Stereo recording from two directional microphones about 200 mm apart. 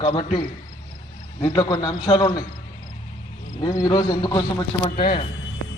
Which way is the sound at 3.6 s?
20° left (ahead or behind).